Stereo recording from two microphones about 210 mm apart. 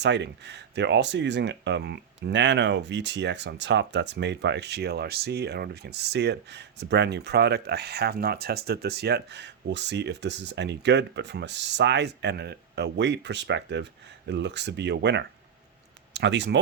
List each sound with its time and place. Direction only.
0.0 s speech: 55° right (ahead or behind)